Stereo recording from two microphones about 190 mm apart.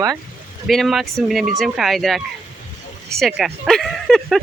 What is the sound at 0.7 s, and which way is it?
Speech, centre (ahead or behind).